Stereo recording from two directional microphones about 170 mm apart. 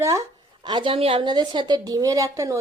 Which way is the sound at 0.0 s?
20° right (ahead or behind).